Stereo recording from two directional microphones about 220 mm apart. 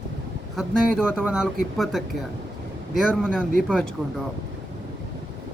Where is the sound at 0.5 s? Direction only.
5° right (ahead or behind).